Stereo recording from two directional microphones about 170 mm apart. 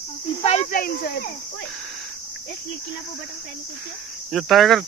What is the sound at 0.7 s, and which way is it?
Speech, 60° left (ahead or behind).